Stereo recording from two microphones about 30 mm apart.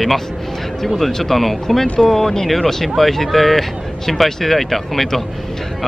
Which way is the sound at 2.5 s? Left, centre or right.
Centre.